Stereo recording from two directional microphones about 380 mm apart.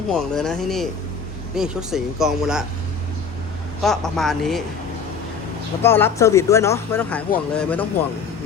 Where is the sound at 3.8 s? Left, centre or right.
Centre.